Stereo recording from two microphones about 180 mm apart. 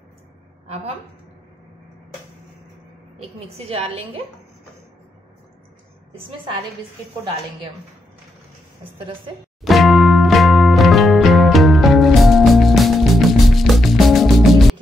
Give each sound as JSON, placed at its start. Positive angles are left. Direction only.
{"t": 3.2, "sound": "a woman's voice", "side_deg": -35}
{"t": 6.1, "sound": "a woman's voice", "side_deg": -25}
{"t": 9.6, "sound": "music", "side_deg": 0}